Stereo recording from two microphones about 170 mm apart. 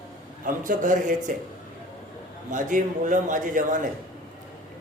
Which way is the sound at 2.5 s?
50° right (ahead or behind).